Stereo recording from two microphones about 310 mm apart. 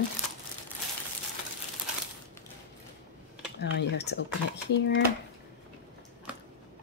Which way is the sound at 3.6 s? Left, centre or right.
Left.